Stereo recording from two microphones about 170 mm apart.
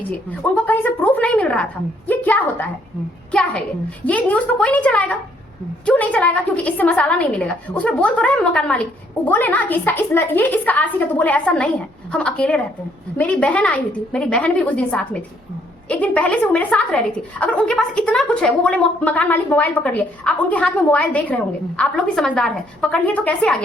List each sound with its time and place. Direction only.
0.1 s a woman's voice: 10° left (ahead or behind)
4.0 s a woman's voice: 10° left (ahead or behind)